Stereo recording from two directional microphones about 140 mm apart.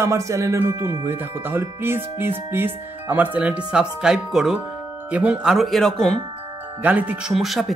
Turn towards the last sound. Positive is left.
turn(degrees=0)  # may be behind; listen again after turning